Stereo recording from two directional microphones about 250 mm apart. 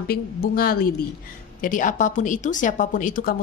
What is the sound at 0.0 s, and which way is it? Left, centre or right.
Speech, left.